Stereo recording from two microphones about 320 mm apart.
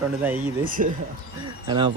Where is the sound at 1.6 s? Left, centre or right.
Centre.